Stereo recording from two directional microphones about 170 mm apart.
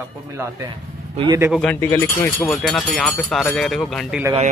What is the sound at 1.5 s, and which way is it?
Speech, 5° left (ahead or behind).